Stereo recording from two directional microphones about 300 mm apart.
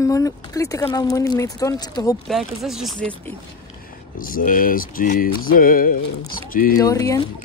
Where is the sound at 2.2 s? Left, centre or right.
Centre.